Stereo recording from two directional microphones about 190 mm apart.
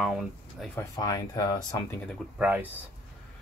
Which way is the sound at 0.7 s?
20° left (ahead or behind).